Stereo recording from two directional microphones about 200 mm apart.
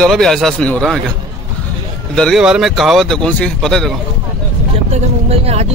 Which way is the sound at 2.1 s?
Centre (ahead or behind).